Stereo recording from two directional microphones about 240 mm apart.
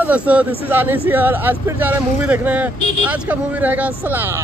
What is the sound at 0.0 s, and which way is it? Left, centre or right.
Speech, centre.